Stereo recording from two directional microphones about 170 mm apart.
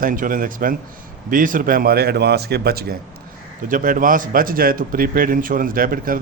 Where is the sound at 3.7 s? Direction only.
50° right (ahead or behind).